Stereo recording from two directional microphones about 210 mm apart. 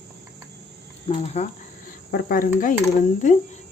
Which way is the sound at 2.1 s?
40° left (ahead or behind).